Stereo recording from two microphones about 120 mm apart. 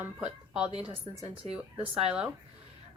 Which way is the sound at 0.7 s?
45° right (ahead or behind).